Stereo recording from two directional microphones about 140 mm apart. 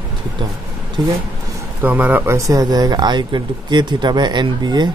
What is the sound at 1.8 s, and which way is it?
Speech, 15° right (ahead or behind).